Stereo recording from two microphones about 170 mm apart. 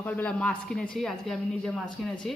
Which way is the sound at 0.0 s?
10° left (ahead or behind).